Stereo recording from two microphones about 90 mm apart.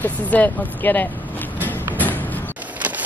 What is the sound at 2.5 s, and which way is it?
Vehicle, 15° right (ahead or behind).